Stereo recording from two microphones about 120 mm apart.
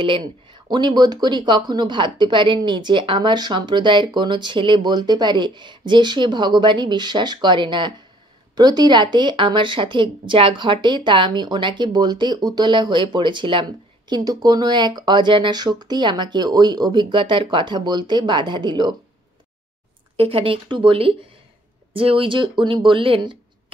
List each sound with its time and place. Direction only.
0.0 s speech: 45° right (ahead or behind)
20.2 s speech: 50° right (ahead or behind)